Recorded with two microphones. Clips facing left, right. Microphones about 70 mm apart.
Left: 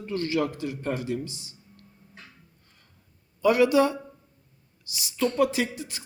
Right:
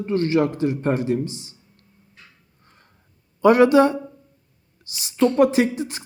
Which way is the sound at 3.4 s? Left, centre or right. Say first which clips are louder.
Right 6 dB; right.